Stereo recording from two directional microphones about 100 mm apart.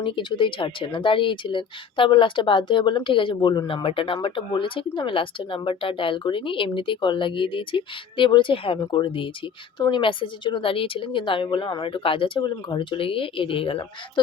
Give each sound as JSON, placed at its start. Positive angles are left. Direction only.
{"t": 0.0, "sound": "speech", "side_deg": 55}